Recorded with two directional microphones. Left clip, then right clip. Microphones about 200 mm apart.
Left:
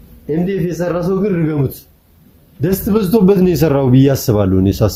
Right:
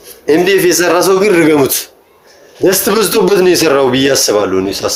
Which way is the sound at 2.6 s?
20° right (ahead or behind).